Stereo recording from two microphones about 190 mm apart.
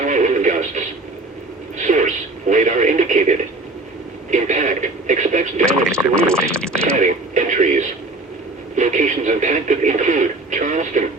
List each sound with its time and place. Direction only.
0.0 s music: 40° right (ahead or behind)
1.8 s radio: 40° right (ahead or behind)
4.3 s speech: 40° right (ahead or behind)
6.1 s speech: 5° left (ahead or behind)
6.9 s speech: 40° right (ahead or behind)